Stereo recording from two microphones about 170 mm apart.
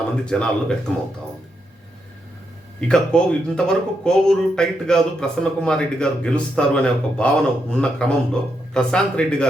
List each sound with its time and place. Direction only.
0.3 s speech: 5° left (ahead or behind)
2.8 s speech: 5° left (ahead or behind)